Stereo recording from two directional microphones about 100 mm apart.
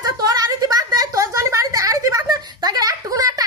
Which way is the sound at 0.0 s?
40° right (ahead or behind).